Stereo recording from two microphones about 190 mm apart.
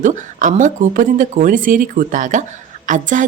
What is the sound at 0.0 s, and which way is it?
Speech, 40° right (ahead or behind).